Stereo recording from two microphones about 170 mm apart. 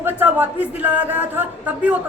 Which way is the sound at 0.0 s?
10° right (ahead or behind).